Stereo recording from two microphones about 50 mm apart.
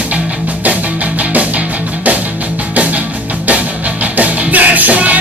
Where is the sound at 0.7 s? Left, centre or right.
Right.